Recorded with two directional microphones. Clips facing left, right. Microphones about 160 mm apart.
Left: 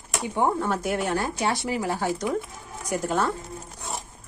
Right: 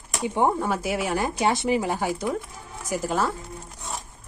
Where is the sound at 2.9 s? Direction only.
Centre (ahead or behind).